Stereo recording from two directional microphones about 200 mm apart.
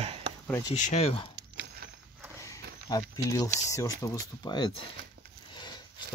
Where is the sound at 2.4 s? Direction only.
15° left (ahead or behind).